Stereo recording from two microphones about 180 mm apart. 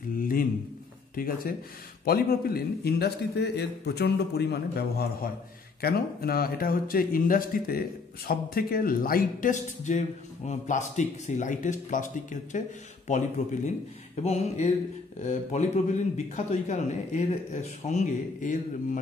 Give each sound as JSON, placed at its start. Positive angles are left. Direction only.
{"t": 0.2, "sound": "a sound", "side_deg": 50}
{"t": 1.1, "sound": "a man's voice", "side_deg": 55}
{"t": 14.2, "sound": "a man's voice", "side_deg": 35}